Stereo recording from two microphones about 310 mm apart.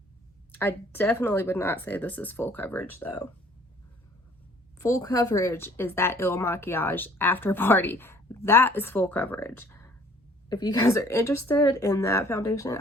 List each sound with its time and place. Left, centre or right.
0.5 s a woman's voice: centre
4.8 s a woman's voice: centre